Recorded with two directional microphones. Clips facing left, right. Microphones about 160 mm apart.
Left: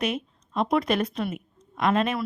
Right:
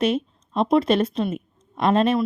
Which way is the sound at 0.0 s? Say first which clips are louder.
Right 6 dB; 30° right (ahead or behind).